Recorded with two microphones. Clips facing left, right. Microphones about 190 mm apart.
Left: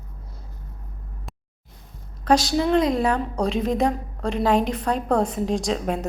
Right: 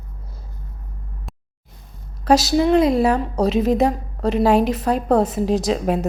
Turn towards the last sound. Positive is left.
turn(degrees=-5)  # may be behind; listen again after turning